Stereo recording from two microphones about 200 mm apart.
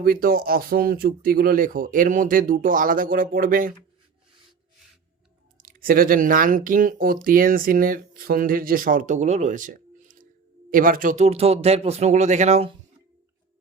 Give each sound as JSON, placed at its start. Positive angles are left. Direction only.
{"t": 0.0, "sound": "speech", "side_deg": -45}
{"t": 5.5, "sound": "speech", "side_deg": -45}